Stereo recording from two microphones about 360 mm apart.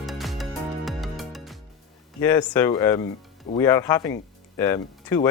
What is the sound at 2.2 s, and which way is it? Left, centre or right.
Speech, centre.